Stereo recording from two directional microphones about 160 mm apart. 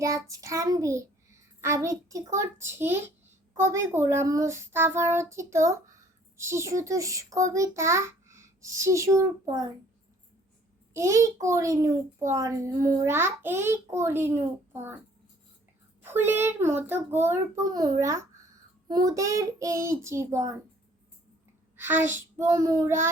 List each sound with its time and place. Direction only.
0.0 s a child's voice: 20° right (ahead or behind)
10.9 s a child's voice: 20° right (ahead or behind)
16.0 s a child's voice: 15° right (ahead or behind)
21.8 s a child's voice: 15° right (ahead or behind)